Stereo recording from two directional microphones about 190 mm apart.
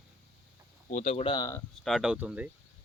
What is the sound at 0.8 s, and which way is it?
Speech, 40° left (ahead or behind).